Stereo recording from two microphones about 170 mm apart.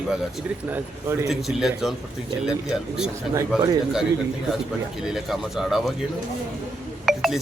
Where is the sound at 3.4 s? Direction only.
20° right (ahead or behind).